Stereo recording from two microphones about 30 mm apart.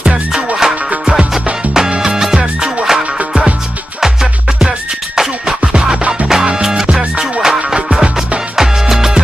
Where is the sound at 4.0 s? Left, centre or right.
Centre.